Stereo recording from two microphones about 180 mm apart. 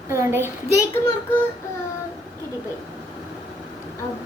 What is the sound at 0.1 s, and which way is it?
Speech, 15° right (ahead or behind).